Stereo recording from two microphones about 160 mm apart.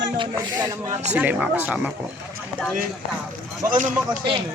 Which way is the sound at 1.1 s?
10° right (ahead or behind).